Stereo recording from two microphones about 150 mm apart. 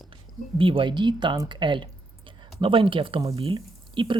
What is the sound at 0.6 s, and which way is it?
Speech, 35° right (ahead or behind).